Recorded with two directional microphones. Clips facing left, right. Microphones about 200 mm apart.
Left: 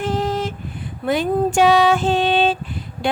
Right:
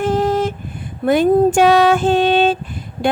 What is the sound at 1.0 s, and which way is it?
Mantra, 50° right (ahead or behind).